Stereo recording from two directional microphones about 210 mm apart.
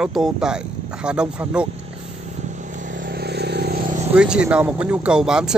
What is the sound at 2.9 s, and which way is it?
Vehicle, 45° right (ahead or behind).